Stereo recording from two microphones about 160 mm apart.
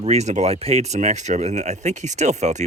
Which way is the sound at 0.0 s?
45° right (ahead or behind).